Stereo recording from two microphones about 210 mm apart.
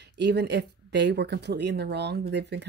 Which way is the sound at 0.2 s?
55° right (ahead or behind).